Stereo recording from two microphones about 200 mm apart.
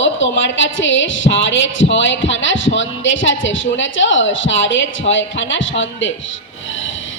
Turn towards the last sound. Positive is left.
turn(degrees=70)  # may be behind; listen again after turning